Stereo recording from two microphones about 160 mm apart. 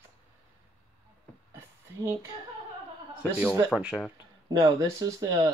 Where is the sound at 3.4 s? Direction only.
5° left (ahead or behind).